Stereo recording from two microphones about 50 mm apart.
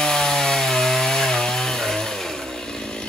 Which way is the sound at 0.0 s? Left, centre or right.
Centre.